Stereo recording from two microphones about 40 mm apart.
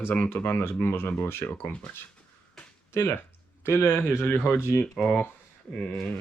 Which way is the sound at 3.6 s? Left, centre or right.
Left.